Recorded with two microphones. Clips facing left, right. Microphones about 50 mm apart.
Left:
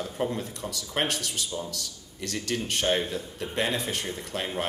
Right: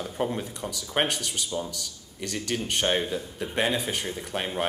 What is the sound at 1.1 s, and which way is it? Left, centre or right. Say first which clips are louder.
A man's voice: right 1 dB; centre.